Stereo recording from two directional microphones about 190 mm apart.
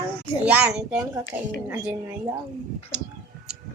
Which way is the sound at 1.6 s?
10° right (ahead or behind).